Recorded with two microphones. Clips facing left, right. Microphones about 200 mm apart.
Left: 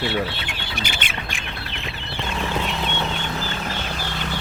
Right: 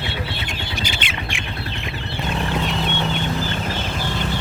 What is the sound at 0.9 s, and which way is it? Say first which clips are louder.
Squawk: right 2 dB; 50° left (ahead or behind).